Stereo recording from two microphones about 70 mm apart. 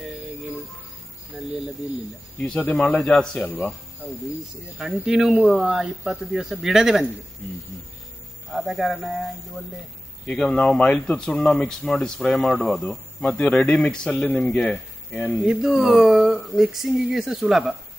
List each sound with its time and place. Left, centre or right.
2.4 s speech: centre
3.4 s speech: left
4.0 s speech: centre
4.7 s speech: centre
8.5 s speech: centre
10.4 s speech: centre
15.4 s speech: centre